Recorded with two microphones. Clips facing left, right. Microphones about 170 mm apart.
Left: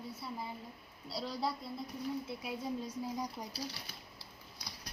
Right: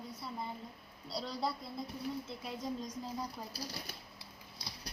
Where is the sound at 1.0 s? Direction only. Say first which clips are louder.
Even; centre (ahead or behind).